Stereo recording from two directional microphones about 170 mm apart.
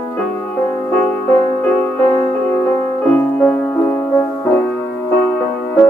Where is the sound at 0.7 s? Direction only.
5° left (ahead or behind).